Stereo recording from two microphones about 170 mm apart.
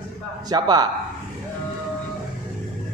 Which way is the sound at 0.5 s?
25° right (ahead or behind).